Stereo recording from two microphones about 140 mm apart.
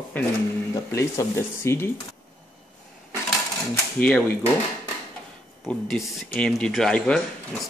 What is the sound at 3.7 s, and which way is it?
Speech, 15° left (ahead or behind).